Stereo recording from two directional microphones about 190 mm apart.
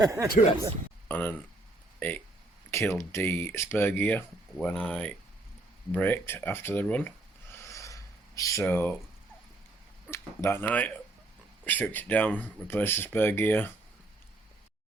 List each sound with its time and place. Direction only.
0.0 s speech: 15° right (ahead or behind)
1.0 s speech: 10° left (ahead or behind)
7.5 s a sound: 15° left (ahead or behind)
10.1 s speech: 15° left (ahead or behind)